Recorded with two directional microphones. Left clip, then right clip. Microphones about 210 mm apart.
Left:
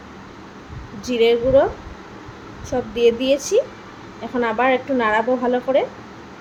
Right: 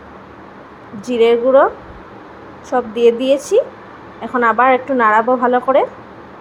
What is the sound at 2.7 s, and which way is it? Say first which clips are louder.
Speech: right 4 dB; 10° right (ahead or behind).